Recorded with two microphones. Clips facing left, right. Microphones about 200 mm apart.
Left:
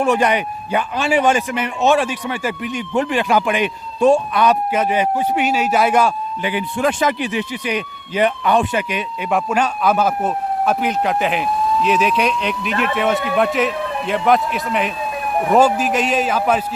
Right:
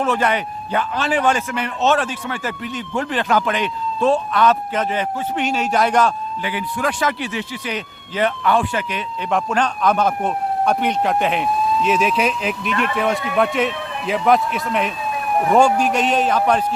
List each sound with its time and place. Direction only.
0.0 s a man's voice: 15° left (ahead or behind)
6.4 s speech: 20° left (ahead or behind)
9.3 s a man's voice: 10° left (ahead or behind)